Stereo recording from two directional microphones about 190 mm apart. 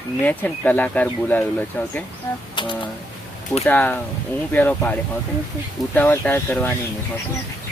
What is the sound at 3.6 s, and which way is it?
Speech, 10° left (ahead or behind).